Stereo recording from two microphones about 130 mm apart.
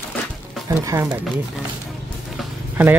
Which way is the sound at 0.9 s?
25° right (ahead or behind).